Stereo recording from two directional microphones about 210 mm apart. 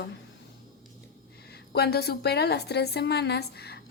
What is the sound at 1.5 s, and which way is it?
A woman's voice, 50° left (ahead or behind).